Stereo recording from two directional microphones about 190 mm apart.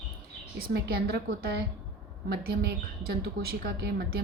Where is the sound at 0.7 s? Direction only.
55° right (ahead or behind).